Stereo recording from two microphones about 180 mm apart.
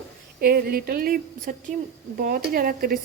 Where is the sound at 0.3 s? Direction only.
60° right (ahead or behind).